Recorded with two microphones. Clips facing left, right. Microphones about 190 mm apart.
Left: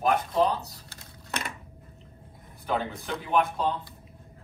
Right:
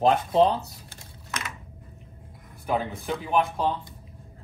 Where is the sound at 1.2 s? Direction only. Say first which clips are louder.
Left 1 dB; 35° left (ahead or behind).